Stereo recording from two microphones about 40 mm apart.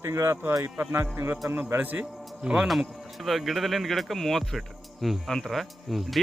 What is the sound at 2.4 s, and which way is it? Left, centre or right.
Speech, right.